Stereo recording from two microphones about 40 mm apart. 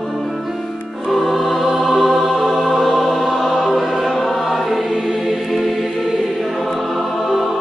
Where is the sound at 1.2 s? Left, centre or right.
Centre.